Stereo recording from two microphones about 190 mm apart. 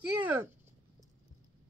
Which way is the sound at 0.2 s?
10° right (ahead or behind).